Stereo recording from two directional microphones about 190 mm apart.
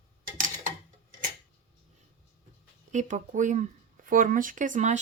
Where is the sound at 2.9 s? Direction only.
40° right (ahead or behind).